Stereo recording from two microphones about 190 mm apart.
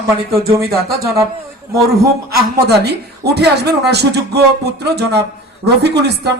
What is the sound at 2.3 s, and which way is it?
Speech, 60° right (ahead or behind).